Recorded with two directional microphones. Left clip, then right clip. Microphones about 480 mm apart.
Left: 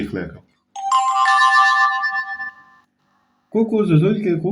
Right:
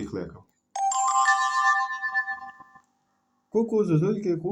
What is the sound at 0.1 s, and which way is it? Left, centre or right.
Speech, right.